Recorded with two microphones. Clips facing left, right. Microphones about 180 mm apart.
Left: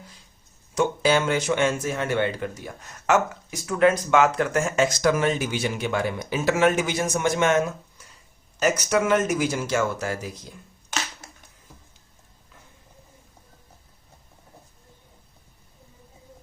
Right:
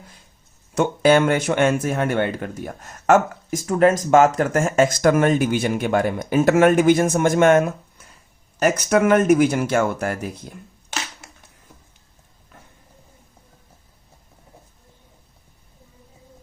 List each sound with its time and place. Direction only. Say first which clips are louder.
0.7 s speech: right 5 dB; 55° right (ahead or behind)